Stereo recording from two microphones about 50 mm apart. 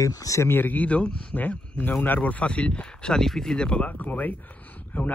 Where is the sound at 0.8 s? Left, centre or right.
Left.